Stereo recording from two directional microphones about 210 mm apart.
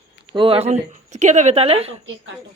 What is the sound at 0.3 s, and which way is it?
A woman's voice, 25° right (ahead or behind).